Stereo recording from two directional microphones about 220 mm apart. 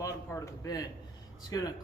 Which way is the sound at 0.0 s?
15° left (ahead or behind).